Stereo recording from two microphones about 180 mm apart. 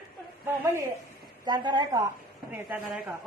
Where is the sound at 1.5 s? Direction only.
25° right (ahead or behind).